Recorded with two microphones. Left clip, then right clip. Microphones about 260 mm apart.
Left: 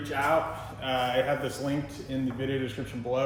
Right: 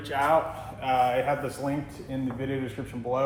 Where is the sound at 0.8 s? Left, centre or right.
Centre.